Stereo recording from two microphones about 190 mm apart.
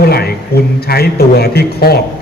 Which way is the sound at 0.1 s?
55° left (ahead or behind).